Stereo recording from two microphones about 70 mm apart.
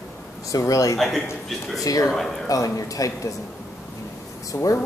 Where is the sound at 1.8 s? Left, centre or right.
Left.